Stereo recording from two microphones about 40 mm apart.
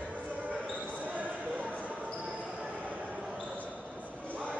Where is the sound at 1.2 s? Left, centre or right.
Right.